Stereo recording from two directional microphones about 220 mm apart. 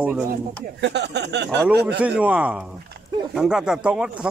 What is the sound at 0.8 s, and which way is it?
Speech, 50° right (ahead or behind).